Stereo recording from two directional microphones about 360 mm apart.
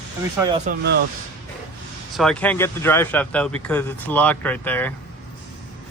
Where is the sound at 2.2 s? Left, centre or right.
Centre.